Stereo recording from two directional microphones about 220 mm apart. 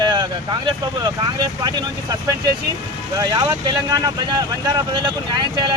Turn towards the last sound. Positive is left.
turn(degrees=-20)  # may be behind; listen again after turning